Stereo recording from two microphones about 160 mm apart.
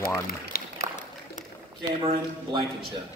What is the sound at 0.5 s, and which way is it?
Run, 70° left (ahead or behind).